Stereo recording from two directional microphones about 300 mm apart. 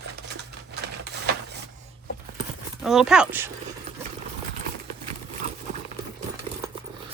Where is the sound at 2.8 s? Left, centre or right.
Centre.